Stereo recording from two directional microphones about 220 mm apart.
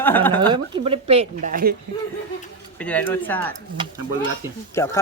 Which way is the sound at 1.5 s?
40° right (ahead or behind).